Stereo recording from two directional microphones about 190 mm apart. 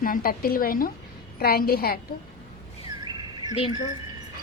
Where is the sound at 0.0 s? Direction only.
50° left (ahead or behind).